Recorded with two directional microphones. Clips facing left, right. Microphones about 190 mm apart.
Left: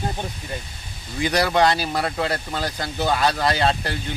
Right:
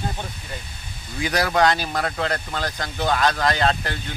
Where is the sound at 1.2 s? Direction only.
Centre (ahead or behind).